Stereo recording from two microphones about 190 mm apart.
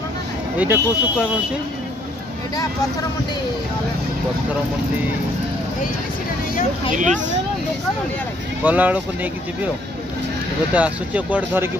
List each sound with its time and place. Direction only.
0.6 s speech: 5° right (ahead or behind)
2.5 s speech: 20° left (ahead or behind)
7.0 s speech: 40° right (ahead or behind)
8.6 s speech: 10° right (ahead or behind)
10.7 s speech: 5° right (ahead or behind)